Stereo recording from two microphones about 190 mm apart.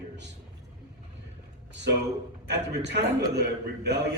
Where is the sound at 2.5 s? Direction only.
65° right (ahead or behind).